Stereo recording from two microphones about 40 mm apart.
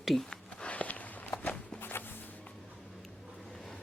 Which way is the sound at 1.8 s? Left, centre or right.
Left.